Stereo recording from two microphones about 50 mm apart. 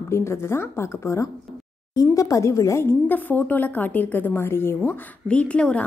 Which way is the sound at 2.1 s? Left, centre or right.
Left.